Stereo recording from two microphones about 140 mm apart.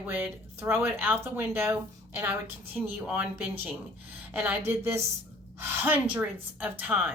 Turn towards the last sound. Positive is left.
turn(degrees=-15)  # may be behind; listen again after turning